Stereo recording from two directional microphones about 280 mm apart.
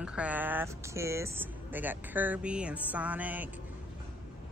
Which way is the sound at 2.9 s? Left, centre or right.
Centre.